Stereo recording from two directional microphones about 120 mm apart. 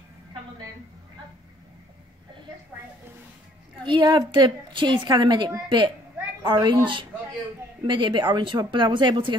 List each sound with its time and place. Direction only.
3.8 s a woman's voice: 40° right (ahead or behind)